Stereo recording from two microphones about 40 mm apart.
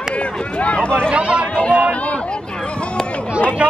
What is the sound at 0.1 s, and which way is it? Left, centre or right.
Run, left.